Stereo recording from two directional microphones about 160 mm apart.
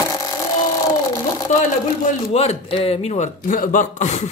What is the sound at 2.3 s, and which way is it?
Speech, 40° left (ahead or behind).